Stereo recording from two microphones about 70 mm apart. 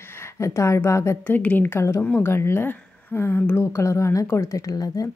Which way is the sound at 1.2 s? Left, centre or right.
Left.